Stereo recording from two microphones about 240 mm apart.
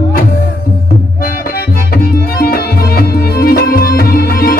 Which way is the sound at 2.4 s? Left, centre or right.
Left.